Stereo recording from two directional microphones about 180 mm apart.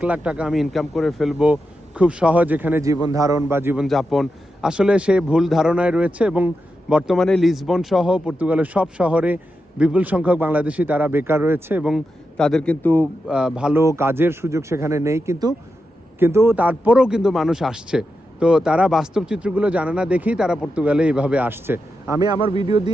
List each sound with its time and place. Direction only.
0.0 s a man's voice: 5° right (ahead or behind)
3.8 s a man's voice: centre (ahead or behind)
13.2 s a man's voice: 5° right (ahead or behind)
22.2 s a man's voice: 25° right (ahead or behind)